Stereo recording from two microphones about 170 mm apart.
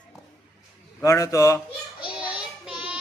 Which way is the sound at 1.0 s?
20° left (ahead or behind).